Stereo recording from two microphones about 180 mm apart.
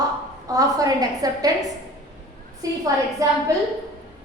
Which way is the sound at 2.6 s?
20° right (ahead or behind).